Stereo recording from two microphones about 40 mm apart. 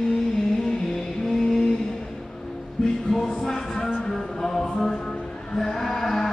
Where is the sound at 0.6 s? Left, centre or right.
Centre.